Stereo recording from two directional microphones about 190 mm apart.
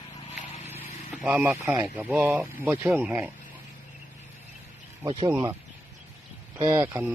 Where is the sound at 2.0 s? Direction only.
10° right (ahead or behind).